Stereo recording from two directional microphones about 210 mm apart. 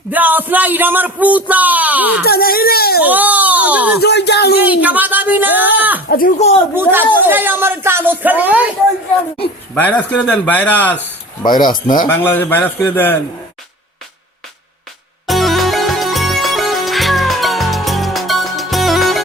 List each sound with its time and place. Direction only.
0.1 s speech: 10° right (ahead or behind)
2.2 s speech: 45° left (ahead or behind)
3.0 s speech: 10° right (ahead or behind)
4.0 s speech: 55° left (ahead or behind)
4.6 s speech: 5° right (ahead or behind)
6.1 s speech: 45° left (ahead or behind)
7.2 s speech: 10° right (ahead or behind)
9.7 s speech: 10° left (ahead or behind)
11.6 s speech: 20° left (ahead or behind)
12.1 s speech: 10° left (ahead or behind)
15.3 s music: centre (ahead or behind)